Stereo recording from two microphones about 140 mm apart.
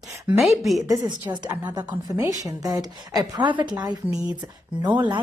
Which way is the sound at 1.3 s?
30° right (ahead or behind).